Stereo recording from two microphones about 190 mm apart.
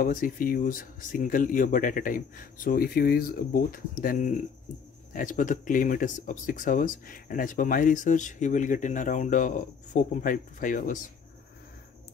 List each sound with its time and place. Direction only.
0.0 s speech: 45° left (ahead or behind)